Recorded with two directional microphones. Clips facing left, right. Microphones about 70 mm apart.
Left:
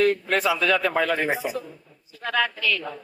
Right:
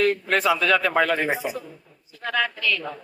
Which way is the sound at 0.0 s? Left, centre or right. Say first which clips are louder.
Even; right.